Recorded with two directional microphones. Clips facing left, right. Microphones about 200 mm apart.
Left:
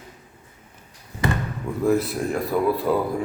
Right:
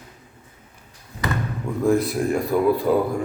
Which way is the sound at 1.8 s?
5° left (ahead or behind).